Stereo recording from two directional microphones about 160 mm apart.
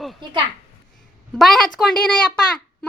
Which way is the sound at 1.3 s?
Centre (ahead or behind).